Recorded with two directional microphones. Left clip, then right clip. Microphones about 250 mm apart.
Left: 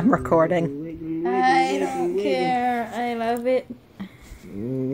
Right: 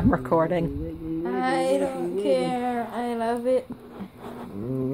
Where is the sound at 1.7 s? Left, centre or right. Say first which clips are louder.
Left 2 dB; centre.